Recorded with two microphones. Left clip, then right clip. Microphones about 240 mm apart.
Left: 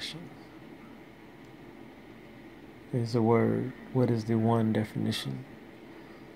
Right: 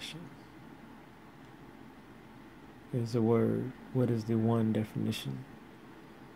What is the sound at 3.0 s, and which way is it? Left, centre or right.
Speech, centre.